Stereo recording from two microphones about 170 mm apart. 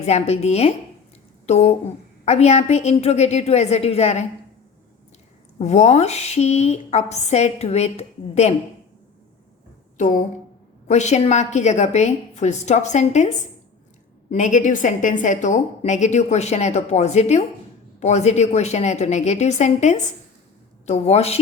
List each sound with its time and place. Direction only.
0.0 s a woman's voice: 40° left (ahead or behind)
5.5 s a woman's voice: 40° left (ahead or behind)
10.8 s a woman's voice: 40° left (ahead or behind)